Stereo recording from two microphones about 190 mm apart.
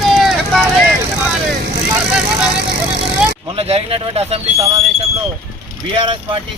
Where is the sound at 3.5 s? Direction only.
30° right (ahead or behind).